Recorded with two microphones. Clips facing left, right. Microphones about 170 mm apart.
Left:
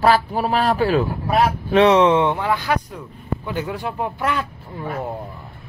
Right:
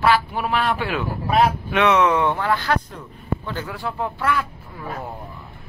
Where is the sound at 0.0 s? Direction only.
40° left (ahead or behind).